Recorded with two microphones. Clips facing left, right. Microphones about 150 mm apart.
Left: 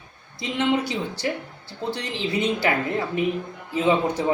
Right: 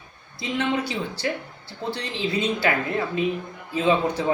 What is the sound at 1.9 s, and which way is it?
Speech, 15° left (ahead or behind).